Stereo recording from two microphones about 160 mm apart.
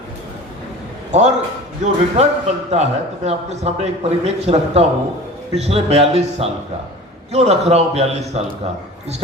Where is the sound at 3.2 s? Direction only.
40° right (ahead or behind).